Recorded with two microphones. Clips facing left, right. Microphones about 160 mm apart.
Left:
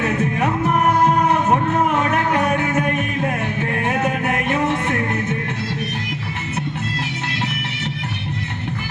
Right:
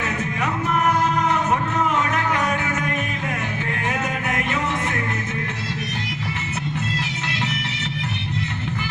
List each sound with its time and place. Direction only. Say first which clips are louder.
1.0 s music: left 4 dB; 55° left (ahead or behind)